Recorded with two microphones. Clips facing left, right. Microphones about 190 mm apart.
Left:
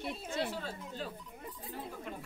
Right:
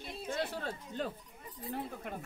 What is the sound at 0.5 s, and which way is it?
Speech, 55° right (ahead or behind).